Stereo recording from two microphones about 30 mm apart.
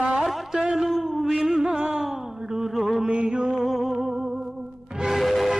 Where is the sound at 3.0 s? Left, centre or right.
Right.